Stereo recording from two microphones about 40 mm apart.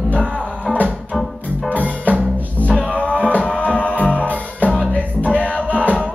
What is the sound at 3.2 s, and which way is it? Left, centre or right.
Music, left.